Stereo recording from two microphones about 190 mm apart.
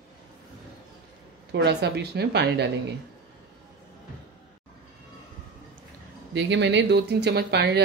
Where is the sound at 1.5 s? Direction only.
60° right (ahead or behind).